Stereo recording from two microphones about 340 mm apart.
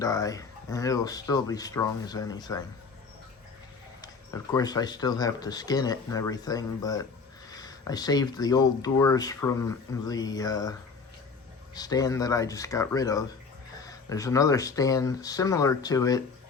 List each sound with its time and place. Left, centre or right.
0.0 s speech: centre
4.5 s speech: centre